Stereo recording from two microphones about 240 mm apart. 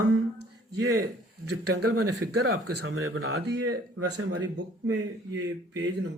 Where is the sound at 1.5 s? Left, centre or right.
Right.